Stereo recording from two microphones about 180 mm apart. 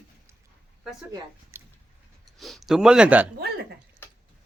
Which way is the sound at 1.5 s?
15° right (ahead or behind).